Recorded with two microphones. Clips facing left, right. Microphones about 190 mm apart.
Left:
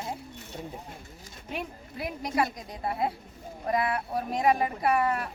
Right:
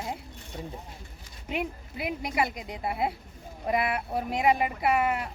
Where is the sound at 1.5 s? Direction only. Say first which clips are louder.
Right 4 dB; 15° right (ahead or behind).